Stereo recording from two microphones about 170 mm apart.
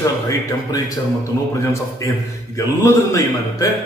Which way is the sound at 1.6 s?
15° left (ahead or behind).